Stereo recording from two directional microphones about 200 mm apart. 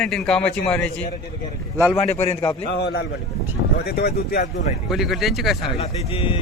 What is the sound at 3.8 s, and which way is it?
Speech, 50° left (ahead or behind).